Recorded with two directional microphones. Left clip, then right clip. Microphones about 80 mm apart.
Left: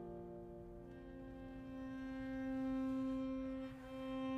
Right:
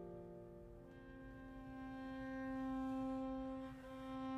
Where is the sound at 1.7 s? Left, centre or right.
Left.